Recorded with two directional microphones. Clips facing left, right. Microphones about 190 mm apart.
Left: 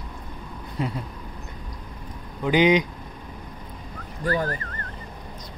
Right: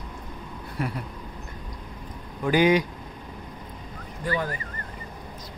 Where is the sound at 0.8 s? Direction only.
20° left (ahead or behind).